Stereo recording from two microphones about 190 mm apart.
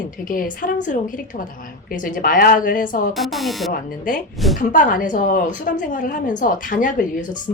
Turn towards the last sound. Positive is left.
turn(degrees=45)  # may be behind; listen again after turning